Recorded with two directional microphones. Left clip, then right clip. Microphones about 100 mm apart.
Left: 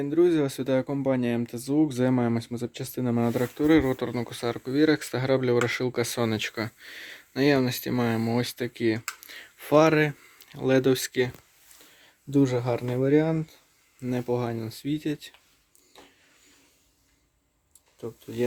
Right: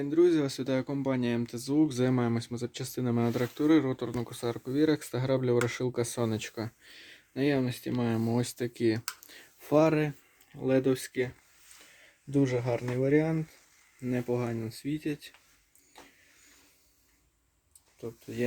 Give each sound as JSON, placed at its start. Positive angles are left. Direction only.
{"t": 0.0, "sound": "speech", "side_deg": 20}
{"t": 8.2, "sound": "speech", "side_deg": -5}
{"t": 10.5, "sound": "speech", "side_deg": 35}
{"t": 12.3, "sound": "speech", "side_deg": 20}